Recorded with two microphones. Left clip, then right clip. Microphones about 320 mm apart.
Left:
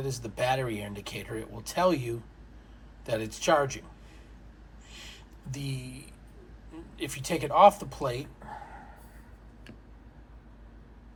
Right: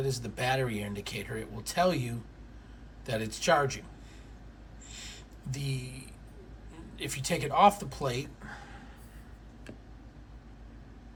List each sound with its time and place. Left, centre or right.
0.0 s speech: centre
4.9 s a sound: centre
6.9 s speech: centre